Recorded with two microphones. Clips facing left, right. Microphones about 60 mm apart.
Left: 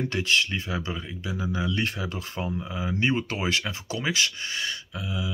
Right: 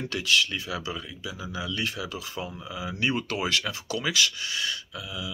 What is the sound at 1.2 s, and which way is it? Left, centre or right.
Speech, left.